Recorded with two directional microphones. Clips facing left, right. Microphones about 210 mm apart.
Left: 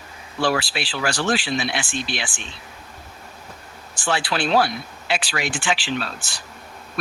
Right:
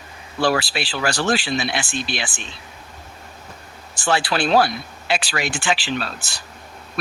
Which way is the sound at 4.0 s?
40° right (ahead or behind).